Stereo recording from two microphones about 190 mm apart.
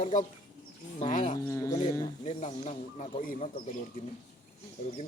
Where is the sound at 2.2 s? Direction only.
40° left (ahead or behind).